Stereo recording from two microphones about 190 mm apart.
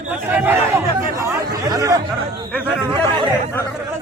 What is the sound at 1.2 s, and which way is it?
Chatter, 20° right (ahead or behind).